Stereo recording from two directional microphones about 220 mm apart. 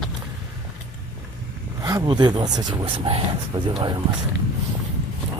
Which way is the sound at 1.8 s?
15° right (ahead or behind).